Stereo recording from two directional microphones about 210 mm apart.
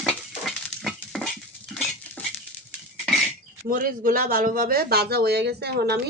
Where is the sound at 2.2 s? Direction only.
5° left (ahead or behind).